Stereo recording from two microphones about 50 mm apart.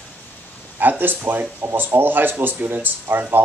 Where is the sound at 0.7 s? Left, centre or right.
Right.